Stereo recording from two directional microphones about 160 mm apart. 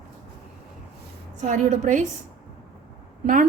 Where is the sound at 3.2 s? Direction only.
55° right (ahead or behind).